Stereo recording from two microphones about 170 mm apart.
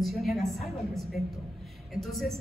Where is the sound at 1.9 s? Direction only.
Centre (ahead or behind).